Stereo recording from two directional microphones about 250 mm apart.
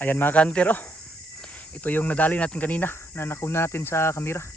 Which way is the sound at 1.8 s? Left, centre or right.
Centre.